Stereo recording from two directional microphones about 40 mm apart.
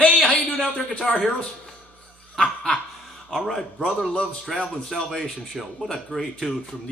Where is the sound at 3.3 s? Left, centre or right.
Centre.